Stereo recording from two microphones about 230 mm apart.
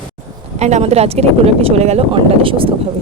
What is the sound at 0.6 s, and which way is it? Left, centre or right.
A woman's voice, right.